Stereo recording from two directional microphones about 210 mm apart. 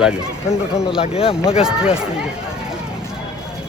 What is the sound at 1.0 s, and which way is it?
Speech, 25° left (ahead or behind).